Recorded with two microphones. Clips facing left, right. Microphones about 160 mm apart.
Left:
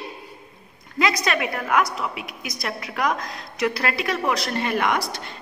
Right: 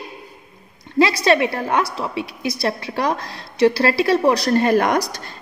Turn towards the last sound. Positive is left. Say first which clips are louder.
# right 6 dB
turn(degrees=-40)  # may be behind; listen again after turning